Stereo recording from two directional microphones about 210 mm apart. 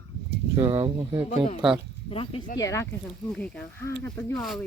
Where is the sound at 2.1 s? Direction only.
25° left (ahead or behind).